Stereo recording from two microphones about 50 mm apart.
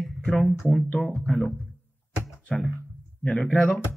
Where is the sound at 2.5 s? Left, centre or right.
Centre.